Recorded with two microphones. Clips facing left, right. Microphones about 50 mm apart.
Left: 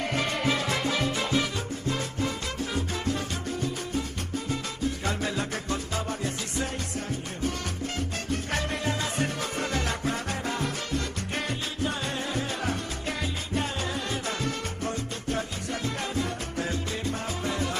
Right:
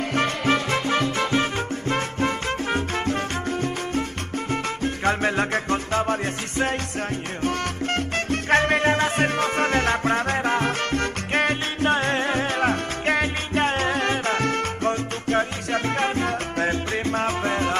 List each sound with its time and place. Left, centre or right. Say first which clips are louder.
0.5 s music: right 7 dB; right
1.1 s salsa music: right 5 dB; right
4.5 s music: right 6 dB; right
7.4 s salsa music: right 7 dB; right